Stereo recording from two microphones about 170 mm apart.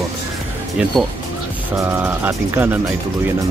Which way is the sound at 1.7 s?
15° right (ahead or behind).